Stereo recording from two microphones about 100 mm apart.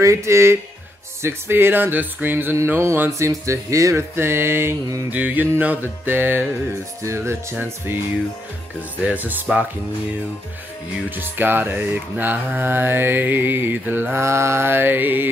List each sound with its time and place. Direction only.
0.0 s music: 30° right (ahead or behind)
5.1 s music: 15° right (ahead or behind)
11.1 s music: 20° right (ahead or behind)